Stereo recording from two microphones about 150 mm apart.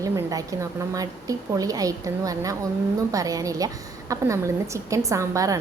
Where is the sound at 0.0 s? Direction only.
20° right (ahead or behind).